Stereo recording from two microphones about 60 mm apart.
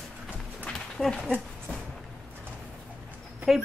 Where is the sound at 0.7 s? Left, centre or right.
Centre.